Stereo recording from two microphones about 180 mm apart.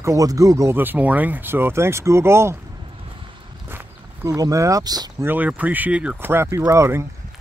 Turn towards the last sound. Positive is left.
turn(degrees=-15)  # may be behind; listen again after turning